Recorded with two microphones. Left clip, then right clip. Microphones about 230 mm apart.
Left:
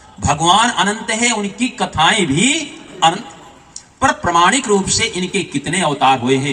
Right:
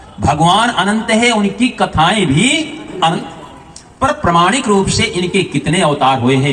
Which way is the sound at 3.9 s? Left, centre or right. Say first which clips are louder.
Right 1 dB; left.